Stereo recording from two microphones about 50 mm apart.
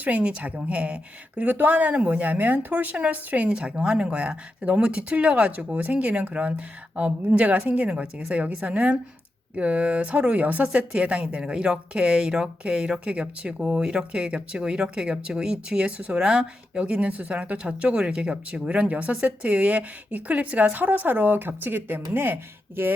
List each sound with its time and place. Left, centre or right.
0.0 s a woman's voice: right
2.9 s a woman's voice: right
3.5 s a woman's voice: centre; by 22.9 s right